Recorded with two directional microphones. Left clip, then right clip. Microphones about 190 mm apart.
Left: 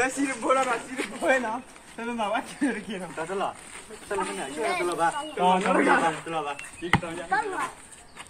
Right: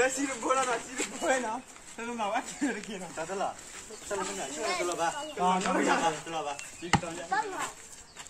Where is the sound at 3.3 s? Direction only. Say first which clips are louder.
Left 3 dB; 20° right (ahead or behind).